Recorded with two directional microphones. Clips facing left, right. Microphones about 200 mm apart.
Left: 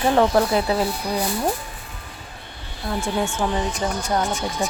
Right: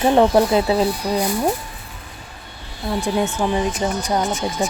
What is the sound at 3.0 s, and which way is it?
Speech, 15° right (ahead or behind).